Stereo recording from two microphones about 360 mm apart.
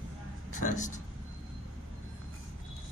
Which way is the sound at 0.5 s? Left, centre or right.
Left.